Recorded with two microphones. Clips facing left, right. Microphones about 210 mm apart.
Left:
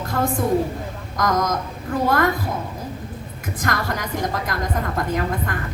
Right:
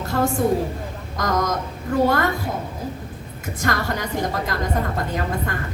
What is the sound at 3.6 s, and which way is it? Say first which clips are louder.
Speech: right 1 dB; 25° right (ahead or behind).